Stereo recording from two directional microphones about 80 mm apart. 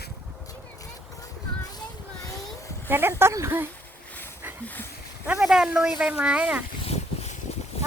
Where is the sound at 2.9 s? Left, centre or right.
Right.